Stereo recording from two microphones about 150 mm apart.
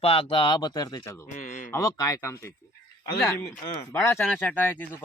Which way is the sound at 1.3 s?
55° left (ahead or behind).